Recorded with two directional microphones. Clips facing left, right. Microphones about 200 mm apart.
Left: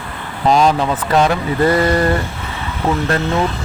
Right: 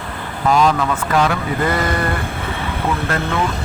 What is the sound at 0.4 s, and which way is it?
Speech, 30° left (ahead or behind).